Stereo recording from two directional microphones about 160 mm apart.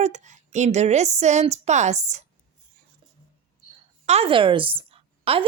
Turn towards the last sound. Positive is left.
turn(degrees=-35)  # may be behind; listen again after turning